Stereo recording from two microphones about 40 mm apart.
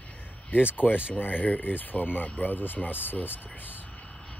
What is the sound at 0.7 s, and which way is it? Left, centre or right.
Speech, left.